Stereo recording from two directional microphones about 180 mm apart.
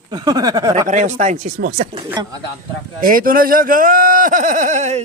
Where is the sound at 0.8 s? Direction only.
45° right (ahead or behind).